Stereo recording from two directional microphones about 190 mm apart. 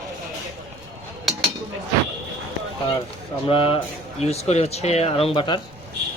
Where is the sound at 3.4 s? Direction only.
30° left (ahead or behind).